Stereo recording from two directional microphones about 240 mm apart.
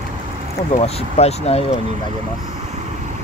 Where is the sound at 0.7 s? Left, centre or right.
Left.